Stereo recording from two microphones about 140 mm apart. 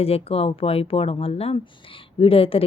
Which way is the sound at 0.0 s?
45° left (ahead or behind).